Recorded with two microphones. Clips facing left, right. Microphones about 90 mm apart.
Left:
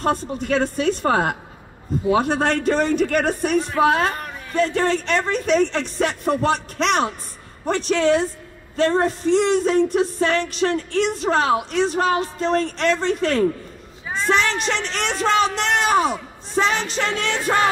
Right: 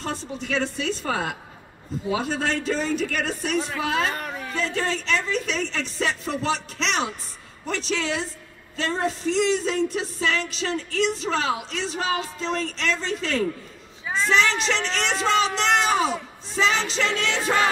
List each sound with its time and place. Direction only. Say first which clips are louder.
0.0 s music: left 8 dB; 50° left (ahead or behind)